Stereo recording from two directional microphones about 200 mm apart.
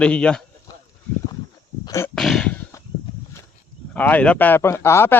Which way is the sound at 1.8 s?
15° left (ahead or behind).